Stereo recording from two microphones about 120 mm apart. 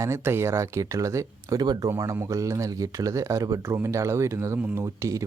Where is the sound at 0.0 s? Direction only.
20° right (ahead or behind).